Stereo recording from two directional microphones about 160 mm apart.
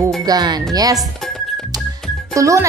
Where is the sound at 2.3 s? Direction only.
20° right (ahead or behind).